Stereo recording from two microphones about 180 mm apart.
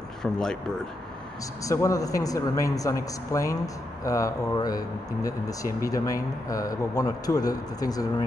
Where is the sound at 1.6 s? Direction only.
20° left (ahead or behind).